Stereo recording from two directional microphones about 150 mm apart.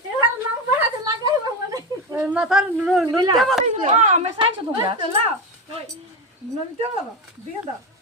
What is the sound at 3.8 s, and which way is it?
Speech, 50° right (ahead or behind).